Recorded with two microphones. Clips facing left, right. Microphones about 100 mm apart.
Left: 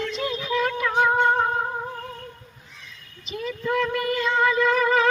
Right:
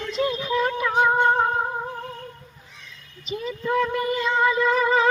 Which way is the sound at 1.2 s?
10° right (ahead or behind).